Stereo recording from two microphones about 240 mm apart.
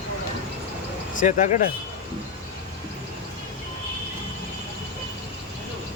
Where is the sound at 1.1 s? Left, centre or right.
Left.